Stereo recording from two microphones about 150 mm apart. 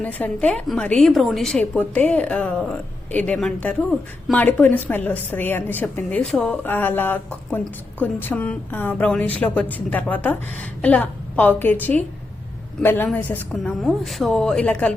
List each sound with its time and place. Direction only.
0.0 s a woman's voice: 10° left (ahead or behind)